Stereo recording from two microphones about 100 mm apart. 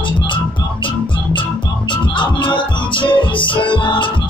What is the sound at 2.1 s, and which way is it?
Music, 55° left (ahead or behind).